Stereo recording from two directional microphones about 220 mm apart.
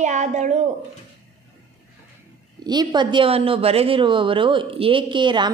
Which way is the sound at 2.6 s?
20° right (ahead or behind).